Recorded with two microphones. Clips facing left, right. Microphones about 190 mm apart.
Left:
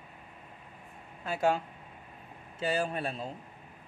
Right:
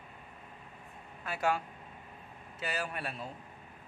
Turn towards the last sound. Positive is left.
turn(degrees=25)  # may be behind; listen again after turning